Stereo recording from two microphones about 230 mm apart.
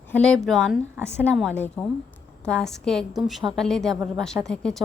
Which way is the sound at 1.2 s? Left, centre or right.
Centre.